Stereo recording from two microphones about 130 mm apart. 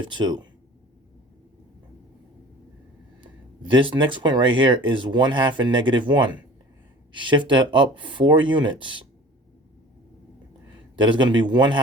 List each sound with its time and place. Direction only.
0.0 s speech: 35° right (ahead or behind)
3.2 s speech: 40° right (ahead or behind)
10.9 s speech: 40° right (ahead or behind)